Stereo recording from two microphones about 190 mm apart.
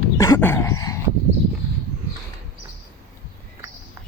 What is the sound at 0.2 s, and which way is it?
Dog, 15° left (ahead or behind).